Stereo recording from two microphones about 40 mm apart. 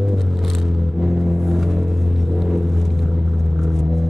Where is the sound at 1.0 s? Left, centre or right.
Centre.